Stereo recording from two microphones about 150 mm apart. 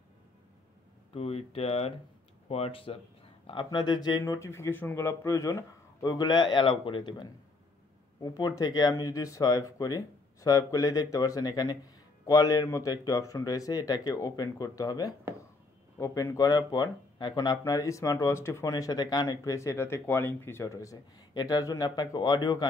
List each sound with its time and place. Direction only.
1.1 s speech: 40° left (ahead or behind)